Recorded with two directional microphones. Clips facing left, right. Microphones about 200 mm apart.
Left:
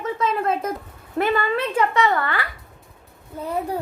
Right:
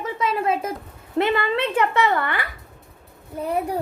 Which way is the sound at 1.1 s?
25° right (ahead or behind).